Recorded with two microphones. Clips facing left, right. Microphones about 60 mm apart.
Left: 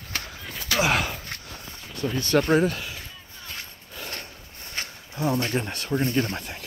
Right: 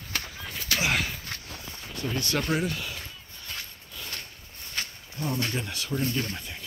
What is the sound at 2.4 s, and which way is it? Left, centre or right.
Speech, left.